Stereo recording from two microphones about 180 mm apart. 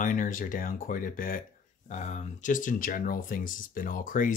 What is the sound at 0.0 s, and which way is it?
Mantra, 45° left (ahead or behind).